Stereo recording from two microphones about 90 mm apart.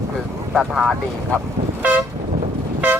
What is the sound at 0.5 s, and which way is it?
Speech, 5° right (ahead or behind).